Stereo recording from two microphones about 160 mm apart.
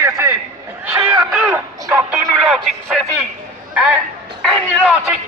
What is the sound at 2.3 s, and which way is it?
Speech, centre (ahead or behind).